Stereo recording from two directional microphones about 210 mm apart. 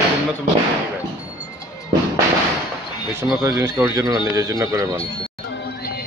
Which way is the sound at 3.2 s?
15° right (ahead or behind).